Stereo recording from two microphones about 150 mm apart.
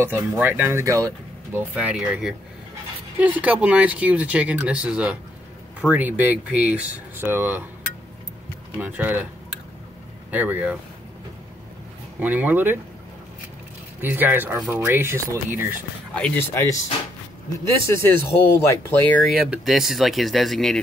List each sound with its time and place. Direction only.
0.2 s speech: 15° right (ahead or behind)
1.8 s speech: 10° right (ahead or behind)
8.7 s speech: 10° right (ahead or behind)
10.3 s speech: 10° right (ahead or behind)
12.2 s speech: 10° right (ahead or behind)
14.0 s speech: 10° right (ahead or behind)
16.2 s speech: 10° left (ahead or behind)
16.5 s speech: 20° left (ahead or behind)
19.2 s speech: 5° right (ahead or behind)